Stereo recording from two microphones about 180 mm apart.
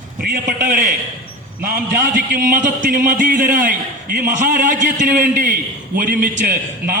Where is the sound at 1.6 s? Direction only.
50° right (ahead or behind).